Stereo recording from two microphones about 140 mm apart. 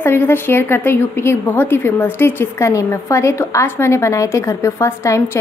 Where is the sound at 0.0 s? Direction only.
15° left (ahead or behind).